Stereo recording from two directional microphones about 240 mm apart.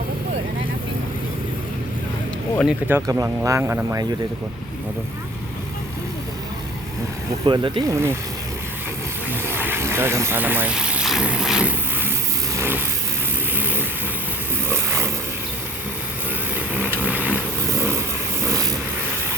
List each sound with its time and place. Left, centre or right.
2.6 s speech: centre
7.4 s speech: centre
9.3 s vehicle: centre
14.7 s a sound: centre
16.6 s vehicle: centre